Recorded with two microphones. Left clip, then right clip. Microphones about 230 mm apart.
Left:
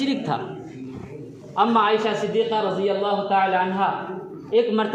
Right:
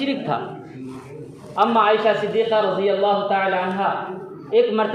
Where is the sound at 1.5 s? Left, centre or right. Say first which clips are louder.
Right 2 dB; left.